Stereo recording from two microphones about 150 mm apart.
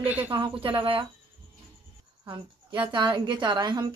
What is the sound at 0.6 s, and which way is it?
Speech, 35° right (ahead or behind).